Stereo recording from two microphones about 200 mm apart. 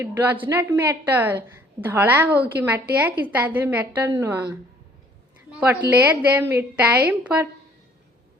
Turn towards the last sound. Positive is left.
turn(degrees=-5)  # may be behind; listen again after turning